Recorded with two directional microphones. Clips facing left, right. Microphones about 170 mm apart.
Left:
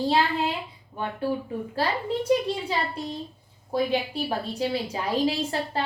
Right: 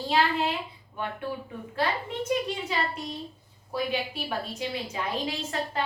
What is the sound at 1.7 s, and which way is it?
A woman's voice, 35° left (ahead or behind).